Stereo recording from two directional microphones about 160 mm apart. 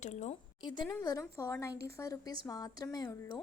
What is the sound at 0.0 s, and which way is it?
Speech, 45° left (ahead or behind).